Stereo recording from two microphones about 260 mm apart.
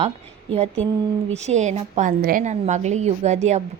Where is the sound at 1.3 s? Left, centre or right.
Right.